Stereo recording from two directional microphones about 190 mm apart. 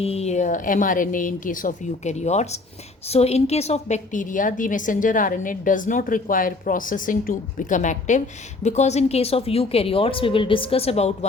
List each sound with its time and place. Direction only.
0.0 s a woman's voice: 35° left (ahead or behind)